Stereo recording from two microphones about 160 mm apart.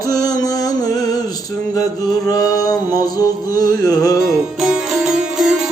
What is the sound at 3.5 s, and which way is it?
Music, 60° right (ahead or behind).